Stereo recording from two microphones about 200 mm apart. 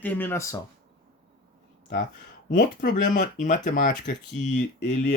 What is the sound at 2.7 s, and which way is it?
Speech, 40° left (ahead or behind).